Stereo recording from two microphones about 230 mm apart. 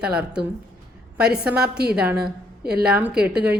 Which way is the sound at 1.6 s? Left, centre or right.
Right.